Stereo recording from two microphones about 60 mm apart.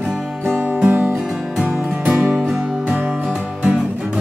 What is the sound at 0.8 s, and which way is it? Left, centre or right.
Music, right.